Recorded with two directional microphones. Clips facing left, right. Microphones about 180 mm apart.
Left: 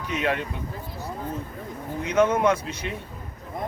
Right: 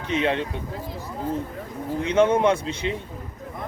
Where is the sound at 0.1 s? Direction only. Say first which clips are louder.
Right 3 dB; 25° right (ahead or behind).